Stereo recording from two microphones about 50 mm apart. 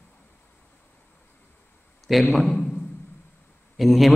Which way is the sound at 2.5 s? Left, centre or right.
Left.